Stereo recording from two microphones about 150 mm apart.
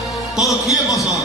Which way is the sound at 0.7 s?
20° left (ahead or behind).